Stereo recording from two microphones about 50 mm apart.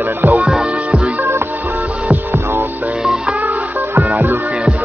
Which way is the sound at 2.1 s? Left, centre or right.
Right.